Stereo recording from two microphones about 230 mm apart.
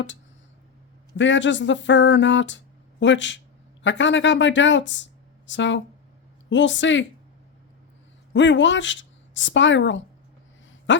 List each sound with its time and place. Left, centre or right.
1.1 s speech: left
8.3 s speech: left